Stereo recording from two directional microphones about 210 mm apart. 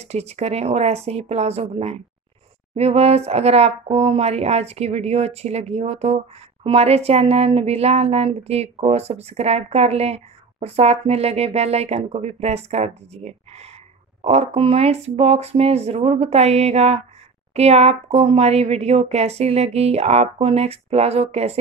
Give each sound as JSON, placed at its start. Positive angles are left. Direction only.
{"t": 0.0, "sound": "speech", "side_deg": -30}